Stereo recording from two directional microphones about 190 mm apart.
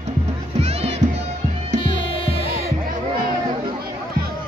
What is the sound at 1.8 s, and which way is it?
Music, 30° left (ahead or behind).